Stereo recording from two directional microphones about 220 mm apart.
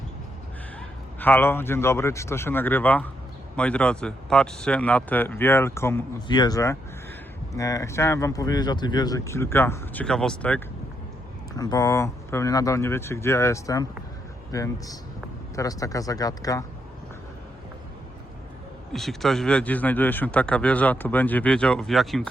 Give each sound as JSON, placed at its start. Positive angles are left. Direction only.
{"t": 0.8, "sound": "a man's voice", "side_deg": 10}
{"t": 11.5, "sound": "speech", "side_deg": 15}
{"t": 18.9, "sound": "speech", "side_deg": 0}